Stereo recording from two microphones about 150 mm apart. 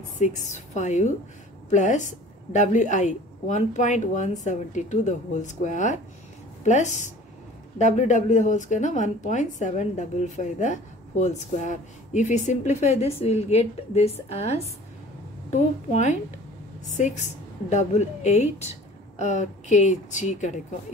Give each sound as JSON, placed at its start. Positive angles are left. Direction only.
{"t": 0.2, "sound": "a woman's voice", "side_deg": 55}